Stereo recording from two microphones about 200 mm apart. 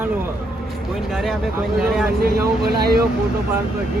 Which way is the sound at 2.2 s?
50° right (ahead or behind).